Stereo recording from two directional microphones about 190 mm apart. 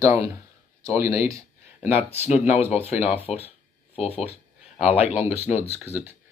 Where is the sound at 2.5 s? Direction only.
30° left (ahead or behind).